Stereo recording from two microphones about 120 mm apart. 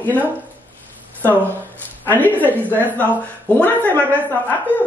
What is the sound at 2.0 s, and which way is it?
Speech, 15° left (ahead or behind).